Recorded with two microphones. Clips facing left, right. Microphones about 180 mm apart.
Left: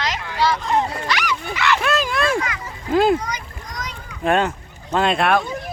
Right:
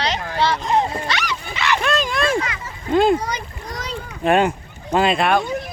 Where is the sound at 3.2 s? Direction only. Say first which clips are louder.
Right 3 dB; 30° right (ahead or behind).